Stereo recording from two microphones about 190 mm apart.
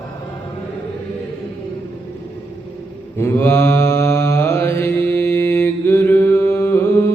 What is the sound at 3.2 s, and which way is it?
Mantra, 10° left (ahead or behind).